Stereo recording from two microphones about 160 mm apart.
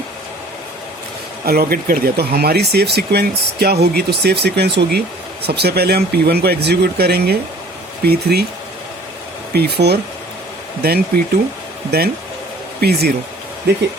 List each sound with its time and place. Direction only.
1.5 s speech: 70° right (ahead or behind)
9.5 s speech: 85° right
10.8 s speech: 75° right (ahead or behind)